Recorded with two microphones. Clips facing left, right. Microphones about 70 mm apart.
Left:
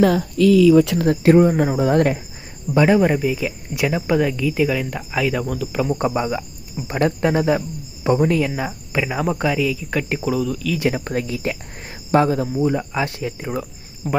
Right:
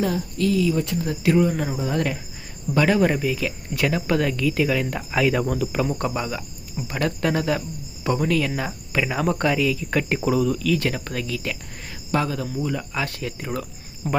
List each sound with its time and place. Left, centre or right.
0.0 s speech: left
1.0 s speech: left
2.7 s speech: centre
6.1 s speech: left; by 10.8 s centre
10.8 s speech: centre
11.0 s speech: left
14.0 s speech: centre